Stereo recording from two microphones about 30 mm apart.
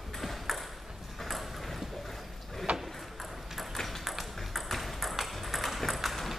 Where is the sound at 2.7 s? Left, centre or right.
Right.